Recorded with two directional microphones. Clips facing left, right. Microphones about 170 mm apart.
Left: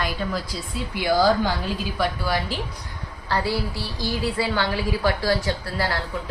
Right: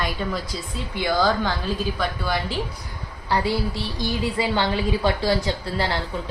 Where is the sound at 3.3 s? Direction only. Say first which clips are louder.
Right 2 dB; 20° right (ahead or behind).